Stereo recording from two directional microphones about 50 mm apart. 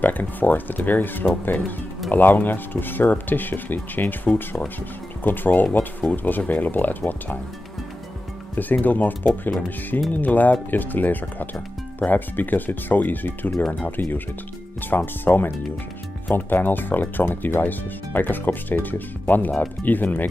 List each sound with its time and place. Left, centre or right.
0.0 s speech: left
8.5 s speech: left